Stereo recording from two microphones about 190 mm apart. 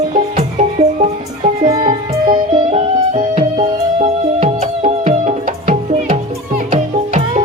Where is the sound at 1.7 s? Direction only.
25° right (ahead or behind).